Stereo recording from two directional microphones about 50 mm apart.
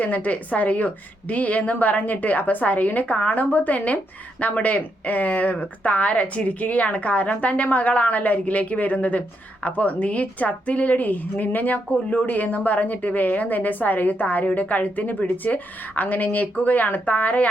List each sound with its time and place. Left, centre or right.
0.0 s a woman's voice: left